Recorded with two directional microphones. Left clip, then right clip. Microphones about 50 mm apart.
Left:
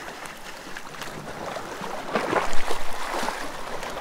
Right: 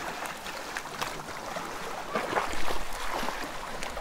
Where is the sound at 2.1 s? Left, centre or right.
Left.